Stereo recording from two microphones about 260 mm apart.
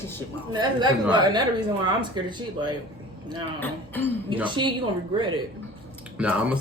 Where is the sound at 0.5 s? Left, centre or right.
Centre.